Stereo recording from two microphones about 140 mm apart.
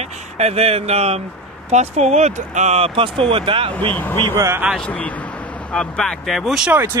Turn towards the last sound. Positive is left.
turn(degrees=-5)  # may be behind; listen again after turning